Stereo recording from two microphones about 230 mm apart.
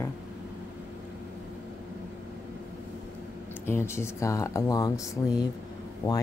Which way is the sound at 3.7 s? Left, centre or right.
Centre.